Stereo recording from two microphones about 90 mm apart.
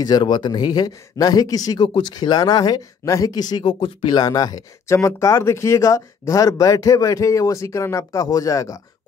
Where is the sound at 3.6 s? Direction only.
75° left (ahead or behind).